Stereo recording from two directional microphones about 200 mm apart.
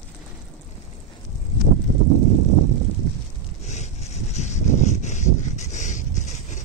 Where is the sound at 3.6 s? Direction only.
35° left (ahead or behind).